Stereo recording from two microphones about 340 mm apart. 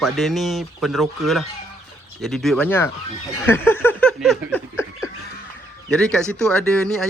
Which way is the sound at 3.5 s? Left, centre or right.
Centre.